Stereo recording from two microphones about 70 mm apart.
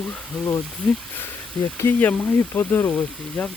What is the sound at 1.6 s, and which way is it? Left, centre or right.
Speech, centre.